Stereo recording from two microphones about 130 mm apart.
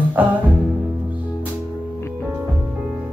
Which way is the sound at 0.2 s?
10° right (ahead or behind).